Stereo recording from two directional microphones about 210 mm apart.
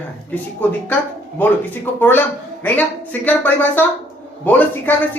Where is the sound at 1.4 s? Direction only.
10° left (ahead or behind).